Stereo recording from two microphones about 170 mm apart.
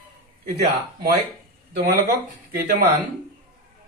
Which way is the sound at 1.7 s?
60° right (ahead or behind).